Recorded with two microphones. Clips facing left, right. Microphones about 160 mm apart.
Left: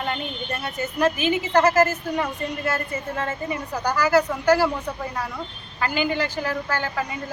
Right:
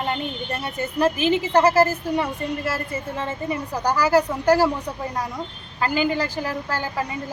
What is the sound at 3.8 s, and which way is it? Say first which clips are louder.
Speech: right 1 dB; 35° right (ahead or behind).